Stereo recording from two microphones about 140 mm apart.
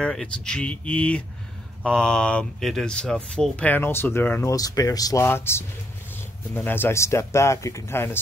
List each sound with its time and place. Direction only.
0.0 s speech: 5° left (ahead or behind)